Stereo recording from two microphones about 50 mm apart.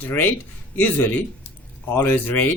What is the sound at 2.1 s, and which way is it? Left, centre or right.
Speech, left.